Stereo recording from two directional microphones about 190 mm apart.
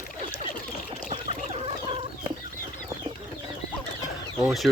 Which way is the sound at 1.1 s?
30° right (ahead or behind).